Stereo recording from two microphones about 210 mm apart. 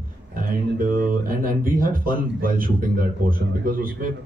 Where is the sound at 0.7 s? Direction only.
40° right (ahead or behind).